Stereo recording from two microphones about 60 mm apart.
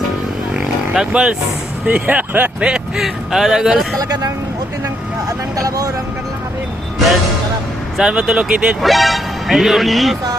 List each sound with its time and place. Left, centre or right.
0.5 s a sound: centre
1.9 s speech: right
3.0 s speech: centre
5.5 s speech: right
7.9 s speech: centre
8.8 s speech: centre